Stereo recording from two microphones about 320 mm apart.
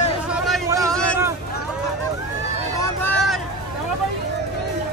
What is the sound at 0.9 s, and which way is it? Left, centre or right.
Hubbub, centre.